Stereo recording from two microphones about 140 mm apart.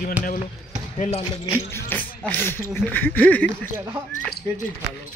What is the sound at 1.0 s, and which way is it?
Speech, 50° left (ahead or behind).